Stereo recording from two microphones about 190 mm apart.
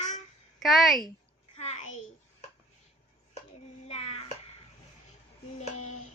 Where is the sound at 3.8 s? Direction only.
35° left (ahead or behind).